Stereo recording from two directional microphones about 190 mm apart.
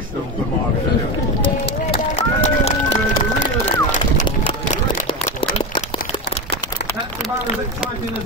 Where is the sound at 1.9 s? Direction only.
35° left (ahead or behind).